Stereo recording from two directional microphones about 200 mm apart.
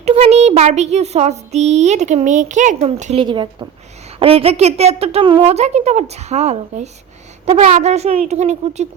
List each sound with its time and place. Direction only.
0.0 s speech: 30° right (ahead or behind)